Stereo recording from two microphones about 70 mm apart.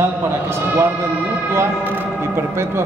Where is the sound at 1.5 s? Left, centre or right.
Right.